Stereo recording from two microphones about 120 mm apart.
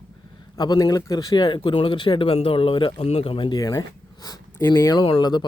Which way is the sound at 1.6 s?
50° left (ahead or behind).